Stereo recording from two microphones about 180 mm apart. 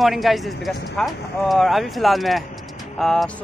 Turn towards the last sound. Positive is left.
turn(degrees=5)  # may be behind; listen again after turning